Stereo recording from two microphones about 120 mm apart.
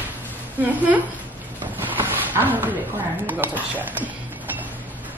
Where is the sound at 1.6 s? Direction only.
15° right (ahead or behind).